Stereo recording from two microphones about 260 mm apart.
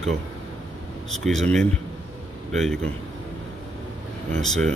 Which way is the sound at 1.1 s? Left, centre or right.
Centre.